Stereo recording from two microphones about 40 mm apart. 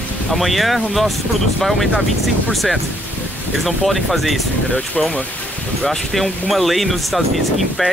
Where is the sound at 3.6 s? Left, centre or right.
Centre.